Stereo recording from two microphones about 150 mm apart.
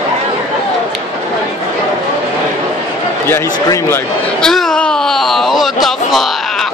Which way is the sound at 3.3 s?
15° left (ahead or behind).